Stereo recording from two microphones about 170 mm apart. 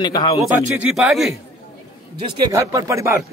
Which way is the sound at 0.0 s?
25° left (ahead or behind).